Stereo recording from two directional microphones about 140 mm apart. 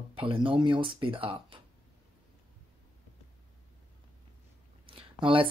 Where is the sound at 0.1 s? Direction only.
40° right (ahead or behind).